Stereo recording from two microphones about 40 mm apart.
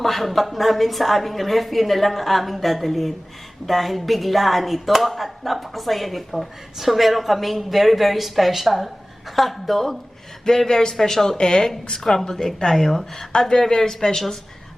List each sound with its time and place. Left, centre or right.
0.0 s speech: centre
10.7 s a woman's voice: centre